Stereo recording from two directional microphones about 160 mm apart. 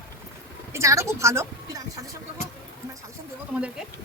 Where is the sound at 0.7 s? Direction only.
20° right (ahead or behind).